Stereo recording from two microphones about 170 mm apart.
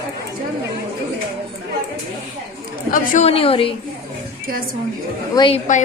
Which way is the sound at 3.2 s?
35° left (ahead or behind).